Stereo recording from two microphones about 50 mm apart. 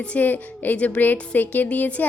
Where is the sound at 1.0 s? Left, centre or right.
Left.